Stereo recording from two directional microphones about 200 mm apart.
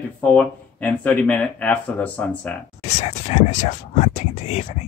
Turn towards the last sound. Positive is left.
turn(degrees=35)  # may be behind; listen again after turning